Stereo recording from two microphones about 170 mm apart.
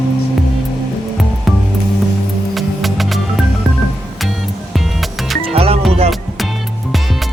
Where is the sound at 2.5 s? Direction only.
Centre (ahead or behind).